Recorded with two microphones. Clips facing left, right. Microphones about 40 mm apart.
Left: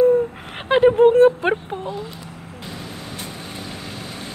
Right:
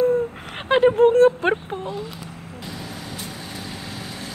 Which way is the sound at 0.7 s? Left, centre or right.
Centre.